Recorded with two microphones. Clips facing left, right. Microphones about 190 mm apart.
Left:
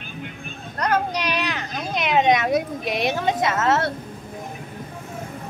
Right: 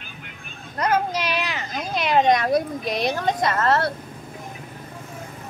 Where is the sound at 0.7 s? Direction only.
5° right (ahead or behind).